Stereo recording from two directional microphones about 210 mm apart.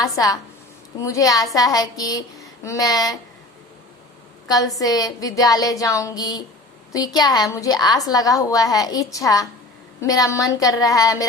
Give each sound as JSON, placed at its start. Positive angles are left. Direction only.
{"t": 1.0, "sound": "a woman's voice", "side_deg": 15}
{"t": 4.4, "sound": "a woman's voice", "side_deg": 15}